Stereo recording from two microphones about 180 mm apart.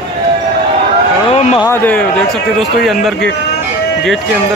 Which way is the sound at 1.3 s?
35° left (ahead or behind).